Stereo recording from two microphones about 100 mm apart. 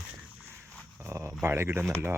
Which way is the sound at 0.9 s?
25° right (ahead or behind).